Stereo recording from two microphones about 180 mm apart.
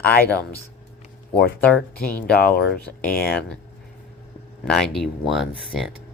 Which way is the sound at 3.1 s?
55° left (ahead or behind).